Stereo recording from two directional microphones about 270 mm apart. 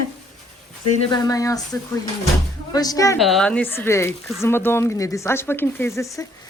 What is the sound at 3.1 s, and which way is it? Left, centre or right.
A woman's voice, centre.